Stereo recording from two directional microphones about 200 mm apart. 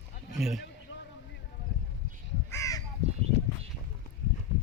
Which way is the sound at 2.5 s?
15° left (ahead or behind).